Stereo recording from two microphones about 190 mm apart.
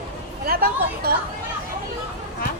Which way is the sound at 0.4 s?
50° right (ahead or behind).